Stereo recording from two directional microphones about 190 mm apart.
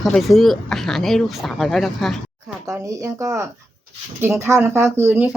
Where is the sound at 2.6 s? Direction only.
15° right (ahead or behind).